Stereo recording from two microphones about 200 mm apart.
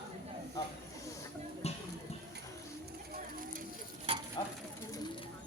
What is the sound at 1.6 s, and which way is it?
Music, 30° left (ahead or behind).